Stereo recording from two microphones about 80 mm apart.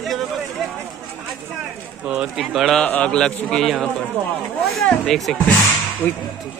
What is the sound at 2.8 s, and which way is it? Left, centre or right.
Speech, centre.